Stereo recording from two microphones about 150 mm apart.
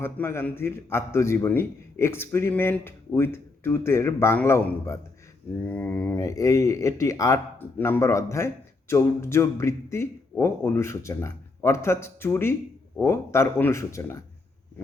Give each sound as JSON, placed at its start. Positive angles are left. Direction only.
{"t": 0.0, "sound": "speech", "side_deg": 15}